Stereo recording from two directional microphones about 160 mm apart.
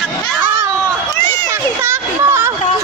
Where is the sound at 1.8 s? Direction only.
15° right (ahead or behind).